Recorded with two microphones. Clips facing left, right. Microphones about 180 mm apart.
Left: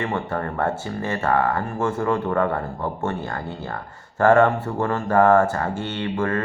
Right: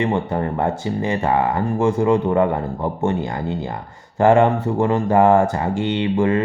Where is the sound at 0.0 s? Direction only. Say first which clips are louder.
Right 5 dB; 20° right (ahead or behind).